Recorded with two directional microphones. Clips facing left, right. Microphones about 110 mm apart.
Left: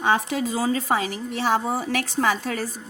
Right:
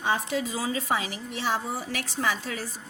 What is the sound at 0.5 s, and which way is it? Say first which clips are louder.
A woman's voice: left 5 dB; 40° left (ahead or behind).